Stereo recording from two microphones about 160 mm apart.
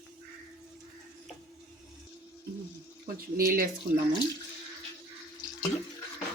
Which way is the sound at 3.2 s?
65° right (ahead or behind).